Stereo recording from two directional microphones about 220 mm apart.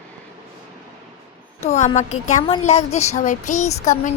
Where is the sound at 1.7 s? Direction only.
30° left (ahead or behind).